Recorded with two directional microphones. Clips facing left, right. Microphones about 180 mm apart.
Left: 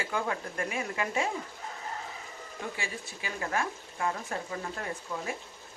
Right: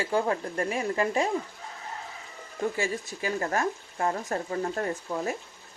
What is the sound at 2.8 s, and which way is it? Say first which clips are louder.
Speech: right 9 dB; 40° right (ahead or behind).